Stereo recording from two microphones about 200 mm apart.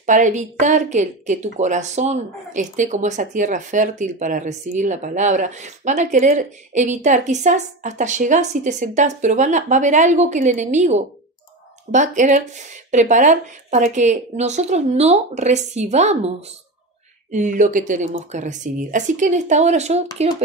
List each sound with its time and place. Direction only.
0.0 s speech: 40° right (ahead or behind)